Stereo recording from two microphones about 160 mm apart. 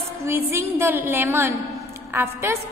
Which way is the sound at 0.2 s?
15° right (ahead or behind).